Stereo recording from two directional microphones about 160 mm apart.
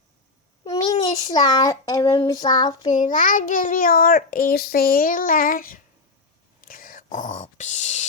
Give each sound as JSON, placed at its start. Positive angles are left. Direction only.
{"t": 0.6, "sound": "a child's voice", "side_deg": 25}
{"t": 2.9, "sound": "a child's voice", "side_deg": 55}
{"t": 6.6, "sound": "whispering", "side_deg": 60}